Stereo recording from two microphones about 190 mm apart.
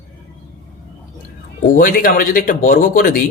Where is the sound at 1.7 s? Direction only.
50° left (ahead or behind).